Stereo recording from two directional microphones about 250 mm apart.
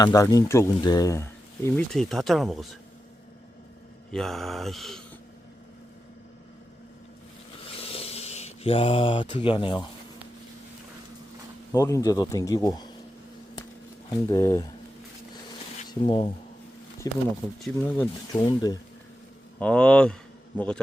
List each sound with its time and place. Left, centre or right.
0.0 s speech: centre
4.1 s mantra: centre
7.8 s a sound: left
11.7 s speech: centre
14.3 s speech: centre
15.9 s speech: left
19.5 s mantra: centre